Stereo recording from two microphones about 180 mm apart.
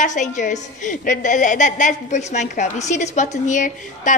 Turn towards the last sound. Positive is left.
turn(degrees=45)  # may be behind; listen again after turning